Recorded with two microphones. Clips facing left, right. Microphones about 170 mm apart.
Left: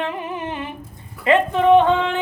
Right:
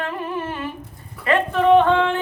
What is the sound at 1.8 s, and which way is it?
Speech, 15° left (ahead or behind).